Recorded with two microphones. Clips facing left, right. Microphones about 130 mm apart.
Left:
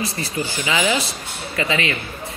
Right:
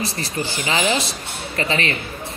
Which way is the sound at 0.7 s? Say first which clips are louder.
Even; 25° right (ahead or behind).